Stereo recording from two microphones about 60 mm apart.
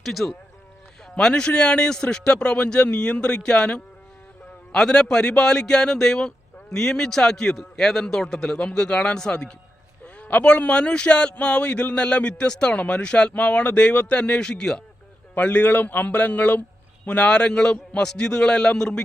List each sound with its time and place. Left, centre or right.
0.0 s speech: centre
1.2 s a man's voice: centre
10.2 s a man's voice: left
15.4 s a man's voice: left